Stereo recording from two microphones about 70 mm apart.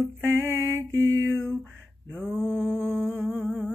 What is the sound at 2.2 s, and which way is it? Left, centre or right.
Humming, centre.